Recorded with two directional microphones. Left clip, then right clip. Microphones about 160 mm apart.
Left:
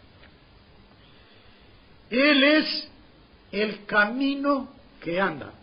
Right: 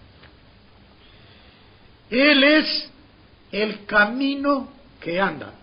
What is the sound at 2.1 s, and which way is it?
Speech, 30° left (ahead or behind).